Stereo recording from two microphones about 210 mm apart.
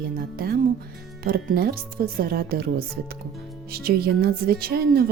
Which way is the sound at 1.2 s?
45° right (ahead or behind).